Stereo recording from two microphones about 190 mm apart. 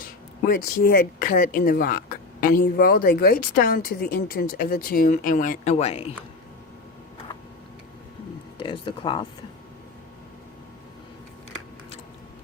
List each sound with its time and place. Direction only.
0.0 s speech: 50° left (ahead or behind); by 6.1 s 35° left (ahead or behind)
8.5 s speech: 25° left (ahead or behind)